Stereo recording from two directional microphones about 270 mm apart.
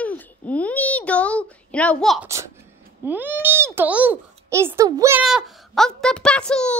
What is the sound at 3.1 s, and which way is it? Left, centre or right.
A child's voice, centre.